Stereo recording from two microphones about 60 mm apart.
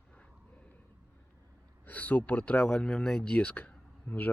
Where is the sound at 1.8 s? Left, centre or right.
Left.